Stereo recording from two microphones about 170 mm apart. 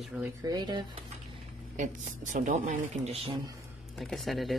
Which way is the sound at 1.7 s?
45° right (ahead or behind).